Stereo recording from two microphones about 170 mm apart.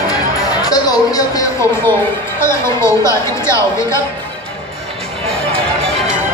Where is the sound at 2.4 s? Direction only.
15° left (ahead or behind).